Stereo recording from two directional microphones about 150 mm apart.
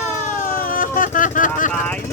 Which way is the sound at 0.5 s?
70° left (ahead or behind).